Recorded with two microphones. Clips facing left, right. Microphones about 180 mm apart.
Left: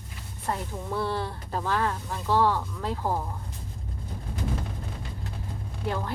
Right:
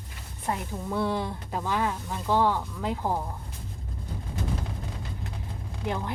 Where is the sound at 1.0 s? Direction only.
15° right (ahead or behind).